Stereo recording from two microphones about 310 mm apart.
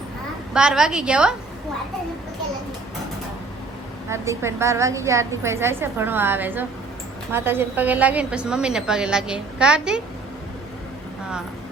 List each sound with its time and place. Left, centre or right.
0.5 s a woman's voice: centre
4.1 s a woman's voice: centre